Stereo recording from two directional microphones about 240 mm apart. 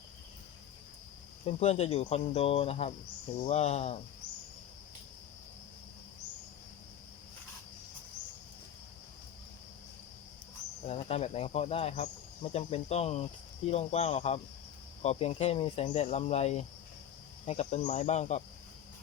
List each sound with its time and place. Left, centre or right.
1.5 s speech: left
10.8 s speech: left